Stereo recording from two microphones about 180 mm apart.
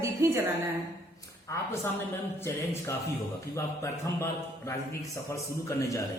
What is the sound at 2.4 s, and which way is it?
Speech, 15° left (ahead or behind).